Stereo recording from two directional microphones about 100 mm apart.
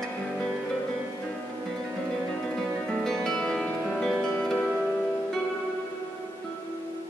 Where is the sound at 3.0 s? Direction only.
10° left (ahead or behind).